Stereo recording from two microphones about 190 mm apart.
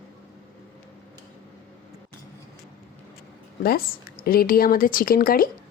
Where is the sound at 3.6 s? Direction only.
50° left (ahead or behind).